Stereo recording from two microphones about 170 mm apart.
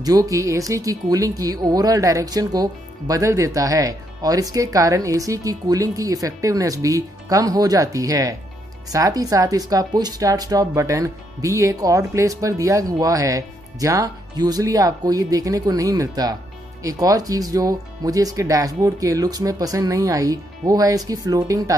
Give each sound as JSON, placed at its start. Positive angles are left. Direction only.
{"t": 0.0, "sound": "speech", "side_deg": -20}